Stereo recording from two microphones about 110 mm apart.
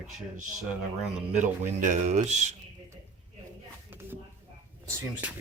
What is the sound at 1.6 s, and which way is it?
Speech, 90° right.